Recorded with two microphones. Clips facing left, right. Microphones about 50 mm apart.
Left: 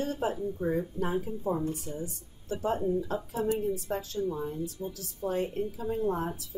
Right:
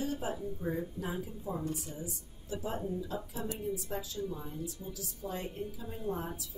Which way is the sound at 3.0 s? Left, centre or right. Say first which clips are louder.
Left 7 dB; left.